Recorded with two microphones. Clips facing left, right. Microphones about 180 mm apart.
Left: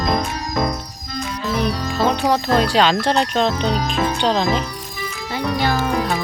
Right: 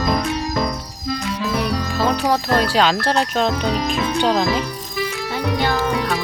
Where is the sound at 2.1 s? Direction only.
5° right (ahead or behind).